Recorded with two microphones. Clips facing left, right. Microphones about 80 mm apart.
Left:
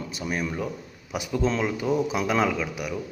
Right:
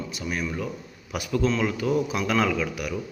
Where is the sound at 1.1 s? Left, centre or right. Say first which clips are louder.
Right 1 dB; centre.